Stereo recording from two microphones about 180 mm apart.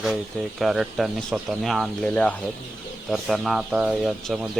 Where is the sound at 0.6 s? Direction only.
Centre (ahead or behind).